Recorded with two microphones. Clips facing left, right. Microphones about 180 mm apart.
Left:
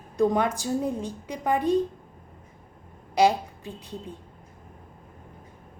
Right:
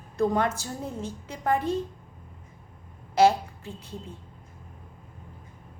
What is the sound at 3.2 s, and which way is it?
Speech, 15° left (ahead or behind).